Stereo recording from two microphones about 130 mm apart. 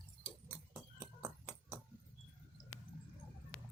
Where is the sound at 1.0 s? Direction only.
20° right (ahead or behind).